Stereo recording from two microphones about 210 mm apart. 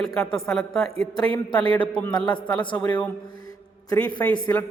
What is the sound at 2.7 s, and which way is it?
Speech, 5° left (ahead or behind).